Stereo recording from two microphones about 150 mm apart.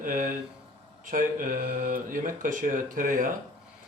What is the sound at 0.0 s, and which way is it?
Speech, 65° right (ahead or behind).